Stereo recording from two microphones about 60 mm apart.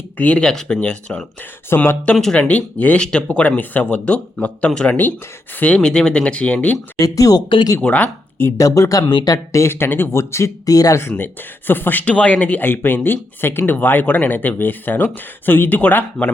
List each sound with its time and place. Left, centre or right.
0.2 s speech: left
1.7 s speech: left
2.1 s speech: left
3.0 s speech: centre
5.5 s speech: left
5.8 s speech: centre
7.0 s speech: left
7.8 s speech: left
8.5 s speech: left
9.7 s speech: left
10.7 s speech: left
11.2 s speech: left